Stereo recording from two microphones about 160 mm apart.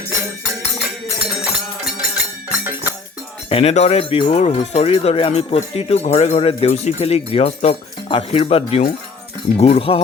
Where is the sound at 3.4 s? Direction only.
40° left (ahead or behind).